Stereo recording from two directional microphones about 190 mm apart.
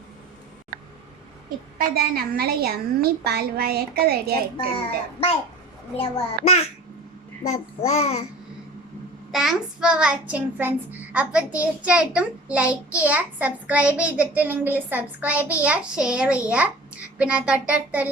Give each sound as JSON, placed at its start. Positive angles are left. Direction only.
{"t": 1.8, "sound": "a woman's voice", "side_deg": -50}
{"t": 6.0, "sound": "a child's voice", "side_deg": 35}
{"t": 9.3, "sound": "a child's voice", "side_deg": 0}